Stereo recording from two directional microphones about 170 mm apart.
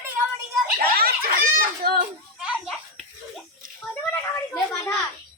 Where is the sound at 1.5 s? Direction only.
65° right (ahead or behind).